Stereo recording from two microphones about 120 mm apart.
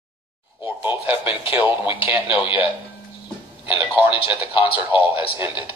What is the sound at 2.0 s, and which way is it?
Speech, 15° right (ahead or behind).